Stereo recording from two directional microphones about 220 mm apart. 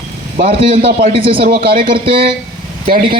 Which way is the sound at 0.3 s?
25° right (ahead or behind).